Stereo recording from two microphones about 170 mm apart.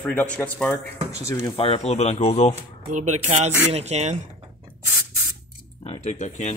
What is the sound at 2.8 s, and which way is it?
Speech, 45° right (ahead or behind).